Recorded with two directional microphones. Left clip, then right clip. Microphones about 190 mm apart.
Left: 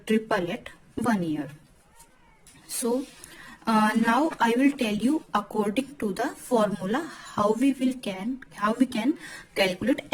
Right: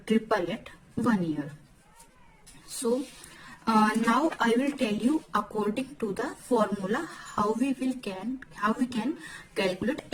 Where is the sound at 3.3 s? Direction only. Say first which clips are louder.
Left 1 dB; 45° left (ahead or behind).